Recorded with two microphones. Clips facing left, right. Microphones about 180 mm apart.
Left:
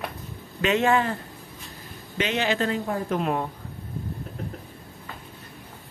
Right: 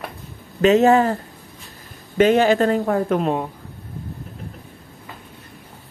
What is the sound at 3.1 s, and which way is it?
Speech, 65° right (ahead or behind).